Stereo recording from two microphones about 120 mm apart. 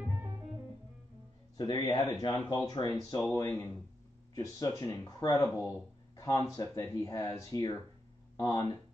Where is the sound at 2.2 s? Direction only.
30° left (ahead or behind).